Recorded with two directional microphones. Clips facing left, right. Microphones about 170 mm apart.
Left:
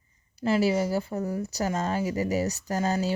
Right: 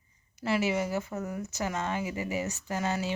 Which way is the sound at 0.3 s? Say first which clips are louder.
Left 5 dB; 30° left (ahead or behind).